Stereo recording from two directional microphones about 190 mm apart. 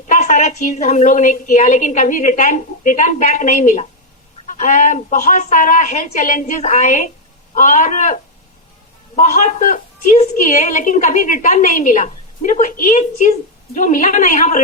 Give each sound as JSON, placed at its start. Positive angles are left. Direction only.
{"t": 0.1, "sound": "a woman's voice", "side_deg": 40}